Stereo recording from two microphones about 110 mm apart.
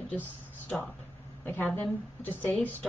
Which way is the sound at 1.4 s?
15° left (ahead or behind).